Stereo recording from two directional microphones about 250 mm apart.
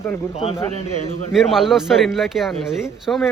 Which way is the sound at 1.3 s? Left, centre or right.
Centre.